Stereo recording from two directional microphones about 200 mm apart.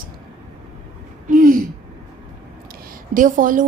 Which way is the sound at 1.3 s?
45° right (ahead or behind).